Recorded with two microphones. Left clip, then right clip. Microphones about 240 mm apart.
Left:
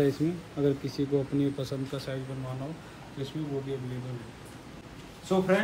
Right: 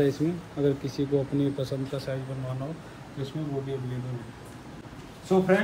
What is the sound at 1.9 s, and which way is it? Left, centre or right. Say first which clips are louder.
Speech: right 3 dB; centre.